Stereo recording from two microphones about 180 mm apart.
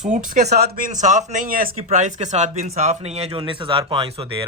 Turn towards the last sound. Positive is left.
turn(degrees=-30)  # may be behind; listen again after turning